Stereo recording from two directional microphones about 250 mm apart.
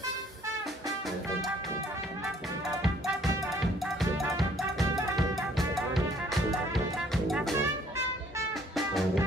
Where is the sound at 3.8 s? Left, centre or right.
Centre.